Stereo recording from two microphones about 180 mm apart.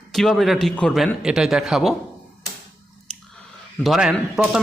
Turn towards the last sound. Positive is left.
turn(degrees=-5)  # may be behind; listen again after turning